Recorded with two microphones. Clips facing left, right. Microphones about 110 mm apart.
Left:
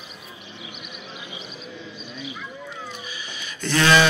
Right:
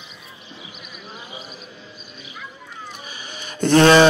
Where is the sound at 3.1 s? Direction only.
45° right (ahead or behind).